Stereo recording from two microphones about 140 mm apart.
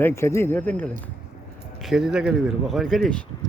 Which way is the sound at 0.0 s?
20° left (ahead or behind).